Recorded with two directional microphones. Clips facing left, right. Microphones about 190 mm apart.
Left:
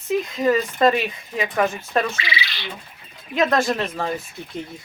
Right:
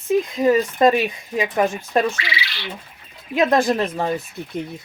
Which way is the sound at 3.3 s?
20° right (ahead or behind).